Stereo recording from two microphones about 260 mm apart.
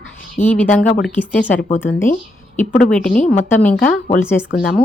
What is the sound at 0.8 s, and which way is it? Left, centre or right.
Speech, left.